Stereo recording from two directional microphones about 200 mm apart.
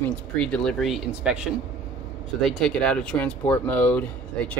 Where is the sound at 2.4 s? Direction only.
5° left (ahead or behind).